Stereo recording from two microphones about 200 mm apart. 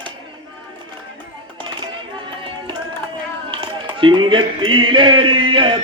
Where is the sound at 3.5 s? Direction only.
25° right (ahead or behind).